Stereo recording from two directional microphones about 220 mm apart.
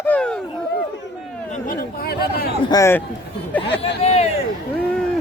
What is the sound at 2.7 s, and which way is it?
Speech, 15° left (ahead or behind).